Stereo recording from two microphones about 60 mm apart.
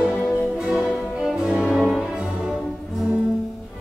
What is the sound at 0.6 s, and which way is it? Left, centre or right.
Music, right.